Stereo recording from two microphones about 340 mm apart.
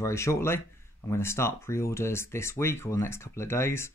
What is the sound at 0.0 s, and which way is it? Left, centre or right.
Speech, centre.